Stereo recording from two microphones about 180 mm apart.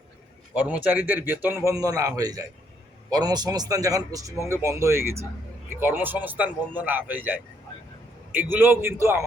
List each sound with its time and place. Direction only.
0.5 s a man's voice: 10° right (ahead or behind)